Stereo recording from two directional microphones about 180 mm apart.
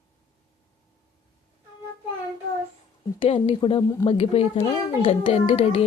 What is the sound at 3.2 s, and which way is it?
A child's voice, 30° left (ahead or behind).